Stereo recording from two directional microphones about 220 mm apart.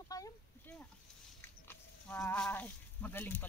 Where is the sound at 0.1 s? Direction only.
10° left (ahead or behind).